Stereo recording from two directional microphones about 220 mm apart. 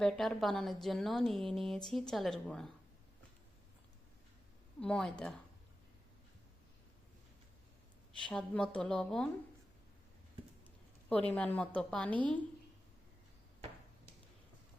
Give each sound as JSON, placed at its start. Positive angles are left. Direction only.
{"t": 0.0, "sound": "a woman's voice", "side_deg": 0}
{"t": 4.8, "sound": "a woman's voice", "side_deg": 5}
{"t": 8.2, "sound": "a woman's voice", "side_deg": 5}
{"t": 11.1, "sound": "a woman's voice", "side_deg": 5}